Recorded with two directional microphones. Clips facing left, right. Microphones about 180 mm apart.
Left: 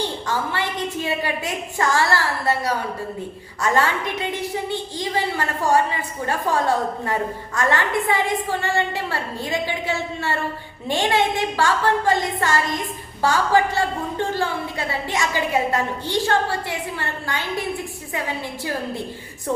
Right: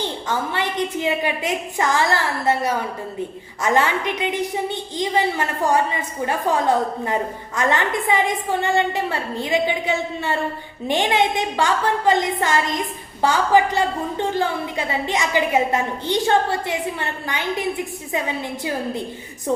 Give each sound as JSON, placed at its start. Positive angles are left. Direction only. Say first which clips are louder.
{"t": 0.3, "sound": "a woman's voice", "louder": "right 4 dB", "side_deg": -20}